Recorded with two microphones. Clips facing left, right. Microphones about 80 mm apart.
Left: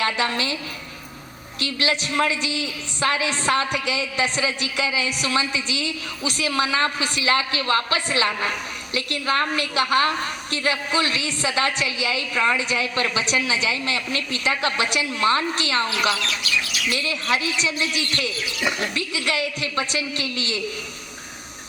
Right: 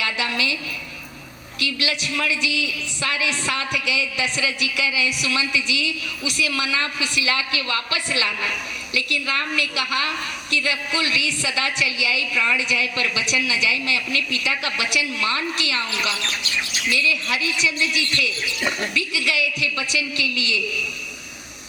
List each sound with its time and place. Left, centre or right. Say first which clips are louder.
0.0 s a woman's voice: left 2 dB; left
16.2 s speech: left 1 dB; right
16.9 s a man's voice: right 1 dB; left